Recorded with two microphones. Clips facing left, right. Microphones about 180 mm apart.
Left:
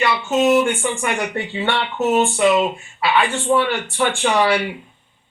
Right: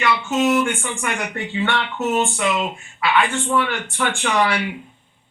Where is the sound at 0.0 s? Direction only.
25° left (ahead or behind).